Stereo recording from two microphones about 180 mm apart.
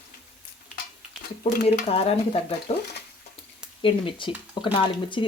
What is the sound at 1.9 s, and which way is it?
Speech, 35° left (ahead or behind).